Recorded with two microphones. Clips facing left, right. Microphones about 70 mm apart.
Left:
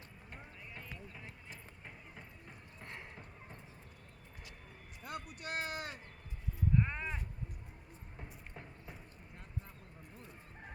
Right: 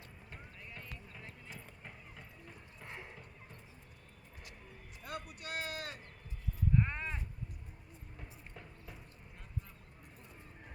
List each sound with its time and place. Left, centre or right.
0.3 s clip-clop: centre
2.8 s horse: centre
5.0 s speech: left
5.7 s speech: centre
6.7 s sheep: centre
8.2 s a sound: centre